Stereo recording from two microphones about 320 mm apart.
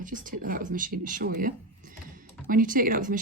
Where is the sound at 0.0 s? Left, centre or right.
Right.